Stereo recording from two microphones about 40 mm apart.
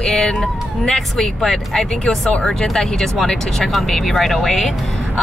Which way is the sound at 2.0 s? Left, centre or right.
Left.